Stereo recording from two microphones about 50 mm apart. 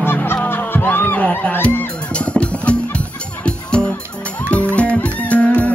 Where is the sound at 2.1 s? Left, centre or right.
Left.